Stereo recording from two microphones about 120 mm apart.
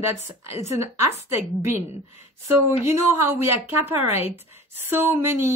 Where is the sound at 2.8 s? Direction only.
20° right (ahead or behind).